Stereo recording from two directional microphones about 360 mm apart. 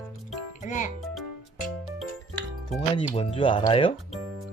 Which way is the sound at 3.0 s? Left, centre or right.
Centre.